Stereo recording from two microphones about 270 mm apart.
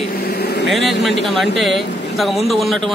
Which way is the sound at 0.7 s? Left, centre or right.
Centre.